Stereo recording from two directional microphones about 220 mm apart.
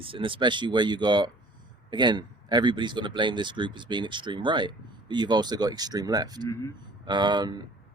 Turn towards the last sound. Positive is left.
turn(degrees=-20)  # may be behind; listen again after turning